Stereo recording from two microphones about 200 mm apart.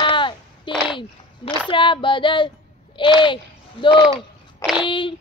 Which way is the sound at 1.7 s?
25° left (ahead or behind).